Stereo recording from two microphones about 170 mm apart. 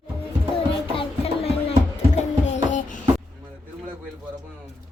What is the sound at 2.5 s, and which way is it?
Music, 45° left (ahead or behind).